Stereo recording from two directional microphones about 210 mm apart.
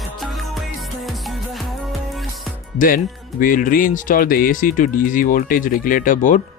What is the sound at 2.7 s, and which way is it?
Speech, 40° left (ahead or behind).